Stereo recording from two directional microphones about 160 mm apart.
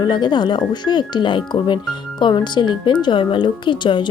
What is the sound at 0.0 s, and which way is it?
Speech, 30° left (ahead or behind).